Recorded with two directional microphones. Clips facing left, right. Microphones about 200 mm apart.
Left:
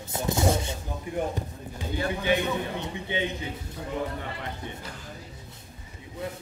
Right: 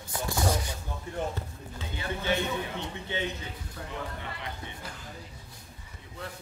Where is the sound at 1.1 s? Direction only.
15° left (ahead or behind).